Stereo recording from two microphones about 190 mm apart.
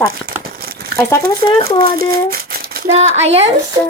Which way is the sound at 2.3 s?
55° right (ahead or behind).